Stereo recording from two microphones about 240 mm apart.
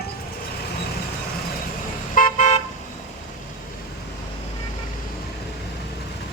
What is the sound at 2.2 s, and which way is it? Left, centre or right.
Car, left.